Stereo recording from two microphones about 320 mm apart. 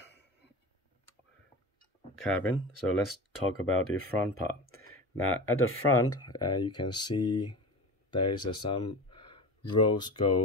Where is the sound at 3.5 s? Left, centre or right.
Left.